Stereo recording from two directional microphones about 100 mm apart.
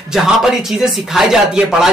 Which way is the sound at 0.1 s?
5° right (ahead or behind).